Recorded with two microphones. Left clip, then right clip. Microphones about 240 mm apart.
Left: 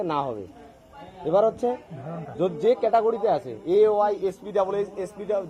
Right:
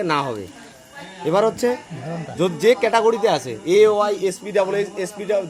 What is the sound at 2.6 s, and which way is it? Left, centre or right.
A man's voice, centre.